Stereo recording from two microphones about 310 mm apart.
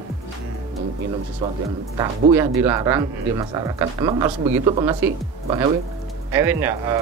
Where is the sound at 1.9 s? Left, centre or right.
Centre.